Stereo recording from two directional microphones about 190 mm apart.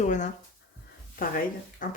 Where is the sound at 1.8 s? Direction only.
45° left (ahead or behind).